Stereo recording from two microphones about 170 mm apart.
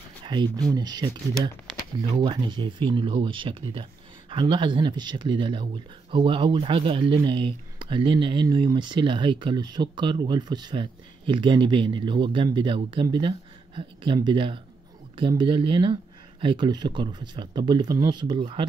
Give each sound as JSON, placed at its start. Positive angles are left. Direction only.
{"t": 0.2, "sound": "speech", "side_deg": -25}